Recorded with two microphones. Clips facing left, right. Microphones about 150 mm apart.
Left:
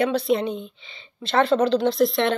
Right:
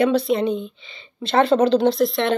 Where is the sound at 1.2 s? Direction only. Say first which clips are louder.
Right 3 dB; 20° right (ahead or behind).